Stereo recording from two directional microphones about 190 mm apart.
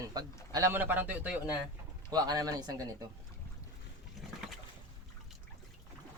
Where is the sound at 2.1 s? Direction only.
20° right (ahead or behind).